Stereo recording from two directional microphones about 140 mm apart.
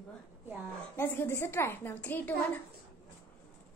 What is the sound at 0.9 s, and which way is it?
A woman's voice, 15° left (ahead or behind).